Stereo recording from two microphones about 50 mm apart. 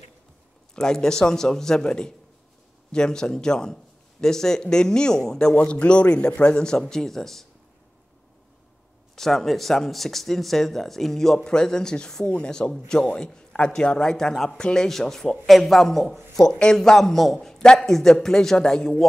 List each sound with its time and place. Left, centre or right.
0.7 s speech: centre
5.6 s a man's voice: left; by 7.4 s centre
9.1 s a man's voice: centre